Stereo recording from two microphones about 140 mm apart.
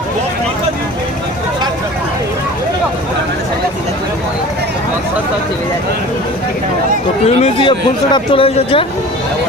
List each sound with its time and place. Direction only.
7.3 s speech: 50° left (ahead or behind)
7.6 s speech: 35° left (ahead or behind)